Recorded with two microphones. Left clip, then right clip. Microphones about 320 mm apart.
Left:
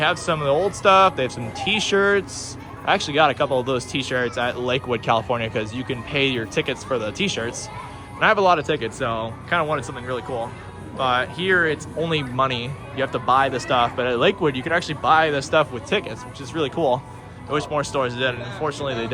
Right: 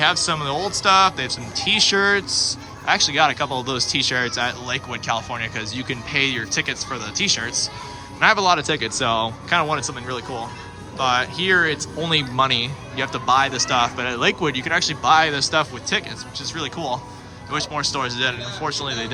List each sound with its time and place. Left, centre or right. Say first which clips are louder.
0.0 s speech: right 1 dB; centre
2.3 s a man's voice: right 13 dB; centre
2.8 s speech: right 1 dB; centre
17.5 s speech: left 1 dB; centre